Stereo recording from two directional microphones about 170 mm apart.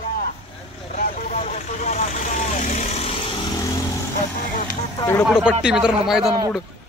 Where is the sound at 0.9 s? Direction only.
45° left (ahead or behind).